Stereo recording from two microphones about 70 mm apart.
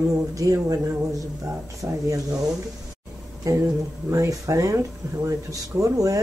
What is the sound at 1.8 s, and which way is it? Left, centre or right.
Speech, right.